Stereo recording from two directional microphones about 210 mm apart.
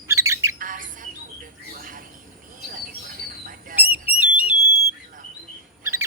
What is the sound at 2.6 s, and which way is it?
Bird, 40° right (ahead or behind).